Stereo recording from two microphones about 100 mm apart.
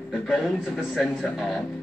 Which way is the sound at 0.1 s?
Centre (ahead or behind).